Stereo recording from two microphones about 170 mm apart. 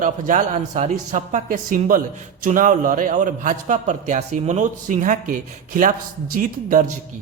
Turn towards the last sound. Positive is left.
turn(degrees=-55)  # may be behind; listen again after turning